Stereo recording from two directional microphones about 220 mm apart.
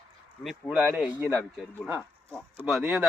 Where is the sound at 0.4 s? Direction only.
5° right (ahead or behind).